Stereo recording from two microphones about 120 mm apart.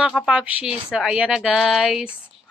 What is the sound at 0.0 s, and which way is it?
A woman's voice, 5° right (ahead or behind).